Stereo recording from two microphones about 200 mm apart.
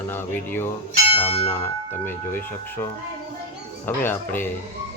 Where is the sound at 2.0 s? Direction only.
10° left (ahead or behind).